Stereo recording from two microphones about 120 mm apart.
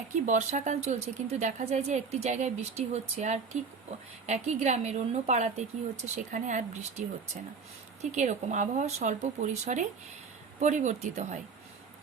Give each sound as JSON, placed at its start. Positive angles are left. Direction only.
{"t": 0.3, "sound": "a woman's voice", "side_deg": -90}
{"t": 8.1, "sound": "speech", "side_deg": -80}